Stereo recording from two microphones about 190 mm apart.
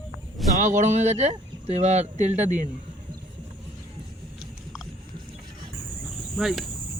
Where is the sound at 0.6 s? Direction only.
40° right (ahead or behind).